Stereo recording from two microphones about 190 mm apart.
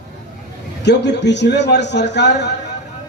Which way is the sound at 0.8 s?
65° left (ahead or behind).